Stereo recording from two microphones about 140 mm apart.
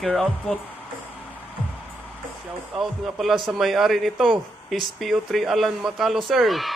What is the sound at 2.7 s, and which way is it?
Speech, centre (ahead or behind).